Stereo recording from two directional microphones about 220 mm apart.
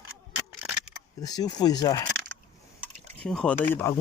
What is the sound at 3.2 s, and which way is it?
Speech, 5° left (ahead or behind).